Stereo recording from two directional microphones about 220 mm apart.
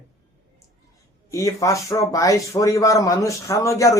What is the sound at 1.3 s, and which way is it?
Speech, 15° left (ahead or behind).